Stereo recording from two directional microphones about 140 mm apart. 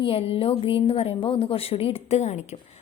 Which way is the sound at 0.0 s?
45° left (ahead or behind).